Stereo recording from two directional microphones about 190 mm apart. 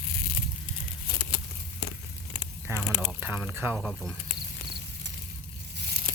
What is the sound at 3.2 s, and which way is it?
Speech, 10° right (ahead or behind).